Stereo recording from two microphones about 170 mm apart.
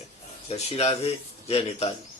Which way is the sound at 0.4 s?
40° left (ahead or behind).